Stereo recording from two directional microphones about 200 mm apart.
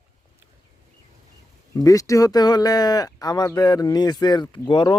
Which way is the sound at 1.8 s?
15° left (ahead or behind).